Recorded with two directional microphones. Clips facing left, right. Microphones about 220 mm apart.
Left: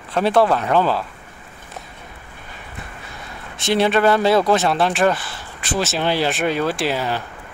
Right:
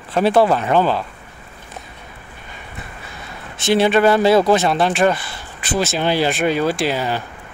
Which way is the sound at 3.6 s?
Centre (ahead or behind).